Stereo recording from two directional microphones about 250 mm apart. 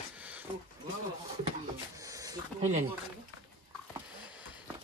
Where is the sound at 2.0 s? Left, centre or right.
Centre.